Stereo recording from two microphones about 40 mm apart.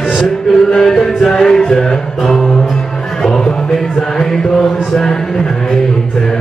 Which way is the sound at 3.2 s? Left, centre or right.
Centre.